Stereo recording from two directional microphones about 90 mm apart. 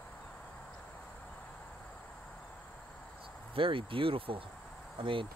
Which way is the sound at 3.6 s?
75° right (ahead or behind).